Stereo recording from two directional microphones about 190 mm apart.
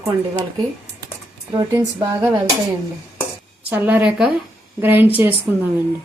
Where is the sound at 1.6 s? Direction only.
15° right (ahead or behind).